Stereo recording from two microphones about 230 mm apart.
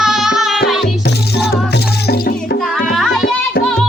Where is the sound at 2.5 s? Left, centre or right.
Centre.